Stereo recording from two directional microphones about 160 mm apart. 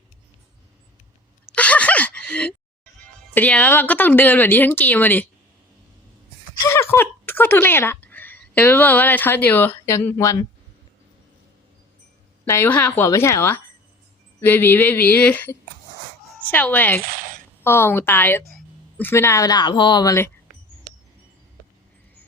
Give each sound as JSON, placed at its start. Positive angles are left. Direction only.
{"t": 1.5, "sound": "a sound", "side_deg": 10}
{"t": 3.3, "sound": "speech", "side_deg": 10}
{"t": 6.7, "sound": "speech", "side_deg": 15}
{"t": 12.5, "sound": "speech", "side_deg": 15}